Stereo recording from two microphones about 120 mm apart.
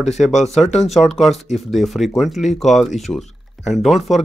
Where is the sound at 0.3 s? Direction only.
75° left (ahead or behind).